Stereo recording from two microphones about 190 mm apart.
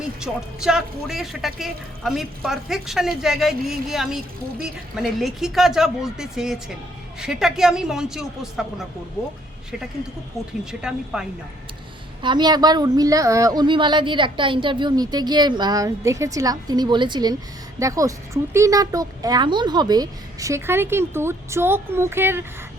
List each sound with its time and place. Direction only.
0.2 s speech: 5° right (ahead or behind)
10.7 s speech: 5° right (ahead or behind)
12.2 s a woman's voice: 25° right (ahead or behind)